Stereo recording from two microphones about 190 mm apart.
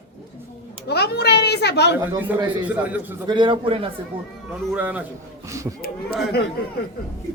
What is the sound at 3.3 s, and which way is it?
Speech, 25° right (ahead or behind).